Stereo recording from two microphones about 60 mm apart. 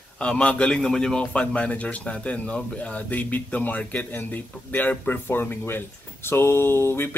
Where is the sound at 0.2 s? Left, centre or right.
Left.